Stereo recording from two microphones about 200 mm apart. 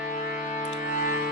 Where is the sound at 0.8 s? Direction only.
45° left (ahead or behind).